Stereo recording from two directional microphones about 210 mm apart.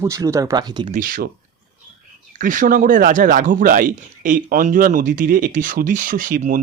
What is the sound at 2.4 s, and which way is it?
Speech, 40° right (ahead or behind).